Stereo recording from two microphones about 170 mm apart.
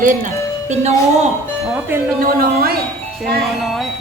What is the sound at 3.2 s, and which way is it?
Speech, centre (ahead or behind).